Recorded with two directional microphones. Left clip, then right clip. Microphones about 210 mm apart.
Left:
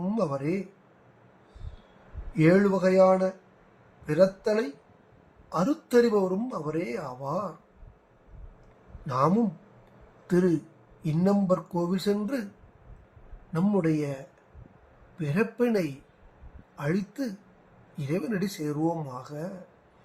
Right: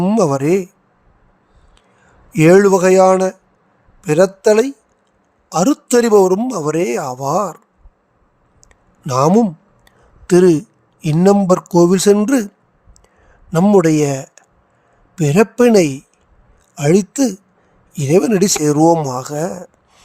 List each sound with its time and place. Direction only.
0.0 s speech: 55° right (ahead or behind)
2.3 s speech: 55° right (ahead or behind)
9.0 s speech: 55° right (ahead or behind)
13.5 s speech: 55° right (ahead or behind)
15.2 s speech: 55° right (ahead or behind)